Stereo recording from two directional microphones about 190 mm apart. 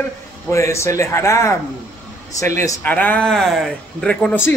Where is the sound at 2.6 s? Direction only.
10° left (ahead or behind).